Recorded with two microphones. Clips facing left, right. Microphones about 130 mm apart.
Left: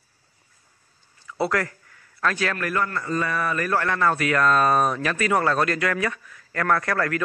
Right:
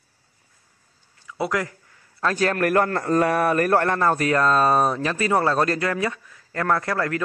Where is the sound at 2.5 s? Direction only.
55° right (ahead or behind); by 7.2 s 25° right (ahead or behind).